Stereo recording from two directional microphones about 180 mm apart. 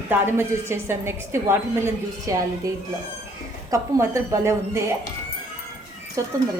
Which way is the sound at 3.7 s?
15° right (ahead or behind).